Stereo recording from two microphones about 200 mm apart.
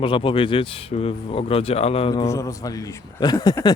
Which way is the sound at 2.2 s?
15° left (ahead or behind).